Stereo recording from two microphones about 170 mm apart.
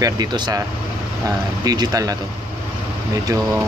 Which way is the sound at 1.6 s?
20° right (ahead or behind).